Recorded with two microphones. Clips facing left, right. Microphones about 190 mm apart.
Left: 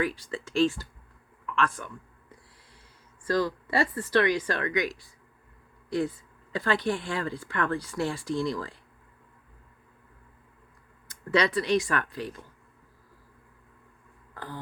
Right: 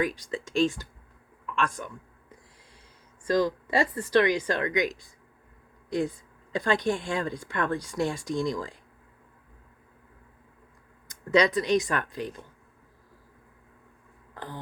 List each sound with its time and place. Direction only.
0.0 s speech: 15° right (ahead or behind)
3.2 s speech: 15° right (ahead or behind)
11.3 s speech: 15° right (ahead or behind)
14.3 s throat clearing: 20° right (ahead or behind)